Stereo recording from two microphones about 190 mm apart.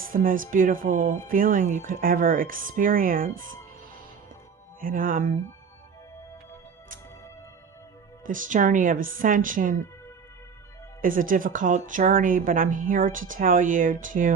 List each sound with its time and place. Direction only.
0.0 s a woman's voice: 50° right (ahead or behind)
4.8 s a woman's voice: 45° right (ahead or behind)
8.3 s a woman's voice: 45° right (ahead or behind)
11.0 s a woman's voice: 45° right (ahead or behind)